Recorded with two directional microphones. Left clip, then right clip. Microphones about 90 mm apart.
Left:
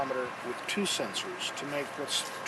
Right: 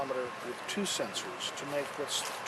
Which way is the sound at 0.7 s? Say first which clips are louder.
Left 3 dB; centre (ahead or behind).